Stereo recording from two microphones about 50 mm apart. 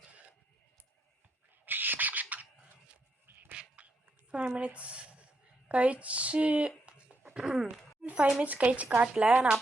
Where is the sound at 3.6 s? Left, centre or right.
Right.